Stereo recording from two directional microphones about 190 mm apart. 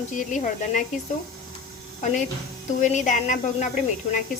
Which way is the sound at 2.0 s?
40° left (ahead or behind).